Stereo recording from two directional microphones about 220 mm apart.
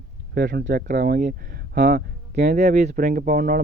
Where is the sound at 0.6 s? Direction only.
40° right (ahead or behind).